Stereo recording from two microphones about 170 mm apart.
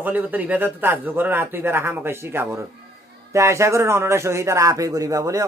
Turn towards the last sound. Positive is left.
turn(degrees=-20)  # may be behind; listen again after turning